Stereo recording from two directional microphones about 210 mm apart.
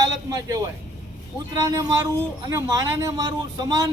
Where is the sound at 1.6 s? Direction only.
15° right (ahead or behind).